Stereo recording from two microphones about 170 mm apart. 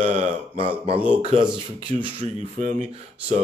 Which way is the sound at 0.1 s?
35° right (ahead or behind).